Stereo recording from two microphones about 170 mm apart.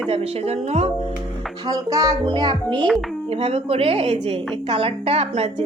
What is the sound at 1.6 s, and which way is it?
Speech, 20° right (ahead or behind).